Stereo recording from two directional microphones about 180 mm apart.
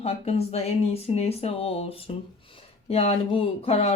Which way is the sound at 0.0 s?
35° left (ahead or behind).